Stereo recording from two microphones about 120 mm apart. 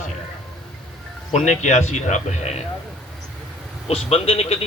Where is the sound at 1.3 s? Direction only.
75° left (ahead or behind).